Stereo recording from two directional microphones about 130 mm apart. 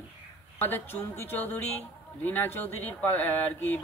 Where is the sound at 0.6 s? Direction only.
15° left (ahead or behind).